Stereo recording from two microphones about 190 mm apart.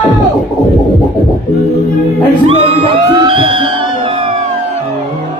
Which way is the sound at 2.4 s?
30° right (ahead or behind).